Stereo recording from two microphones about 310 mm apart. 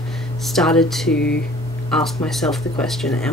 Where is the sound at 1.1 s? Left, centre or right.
Left.